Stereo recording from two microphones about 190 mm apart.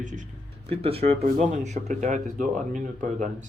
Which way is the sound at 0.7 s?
30° right (ahead or behind).